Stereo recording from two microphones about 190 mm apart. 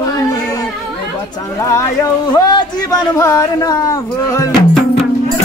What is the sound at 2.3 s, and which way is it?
Speech, 20° left (ahead or behind).